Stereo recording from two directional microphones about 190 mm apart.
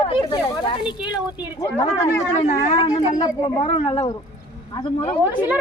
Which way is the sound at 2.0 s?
15° left (ahead or behind).